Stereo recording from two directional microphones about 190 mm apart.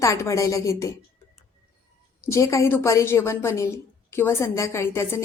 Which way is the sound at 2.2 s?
15° left (ahead or behind).